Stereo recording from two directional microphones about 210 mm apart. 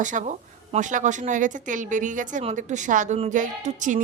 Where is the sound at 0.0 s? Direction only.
35° right (ahead or behind).